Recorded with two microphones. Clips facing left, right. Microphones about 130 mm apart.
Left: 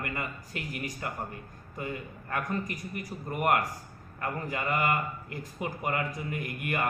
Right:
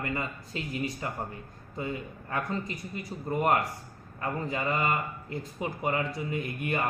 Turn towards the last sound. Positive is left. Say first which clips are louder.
# right 1 dB
turn(degrees=-25)  # may be behind; listen again after turning